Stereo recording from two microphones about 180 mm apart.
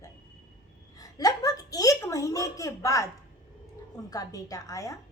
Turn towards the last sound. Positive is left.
turn(degrees=20)  # may be behind; listen again after turning